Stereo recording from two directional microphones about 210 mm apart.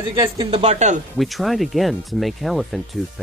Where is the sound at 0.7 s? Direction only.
35° right (ahead or behind).